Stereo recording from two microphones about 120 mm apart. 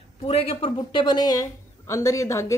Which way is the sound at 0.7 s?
35° left (ahead or behind).